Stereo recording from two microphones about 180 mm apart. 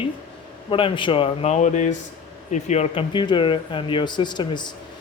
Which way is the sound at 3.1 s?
25° left (ahead or behind).